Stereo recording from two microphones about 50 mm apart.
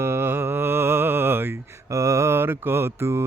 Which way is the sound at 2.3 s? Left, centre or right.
Right.